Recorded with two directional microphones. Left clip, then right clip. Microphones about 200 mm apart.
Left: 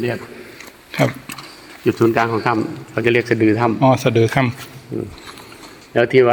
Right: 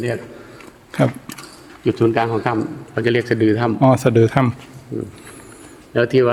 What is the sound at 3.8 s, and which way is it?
Speech, 35° right (ahead or behind).